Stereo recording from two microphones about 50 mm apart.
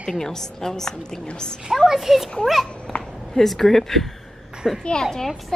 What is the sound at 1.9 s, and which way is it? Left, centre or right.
Speech, centre.